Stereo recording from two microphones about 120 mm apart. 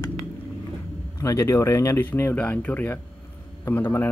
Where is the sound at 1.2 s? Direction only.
25° left (ahead or behind).